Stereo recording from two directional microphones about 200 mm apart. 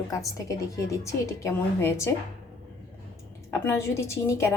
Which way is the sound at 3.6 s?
10° left (ahead or behind).